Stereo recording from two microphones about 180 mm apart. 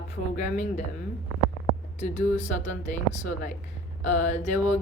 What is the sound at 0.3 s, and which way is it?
Speech, 40° left (ahead or behind).